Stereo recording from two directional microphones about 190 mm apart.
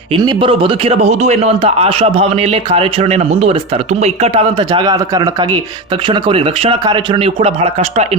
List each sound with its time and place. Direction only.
0.1 s a man's voice: 25° right (ahead or behind)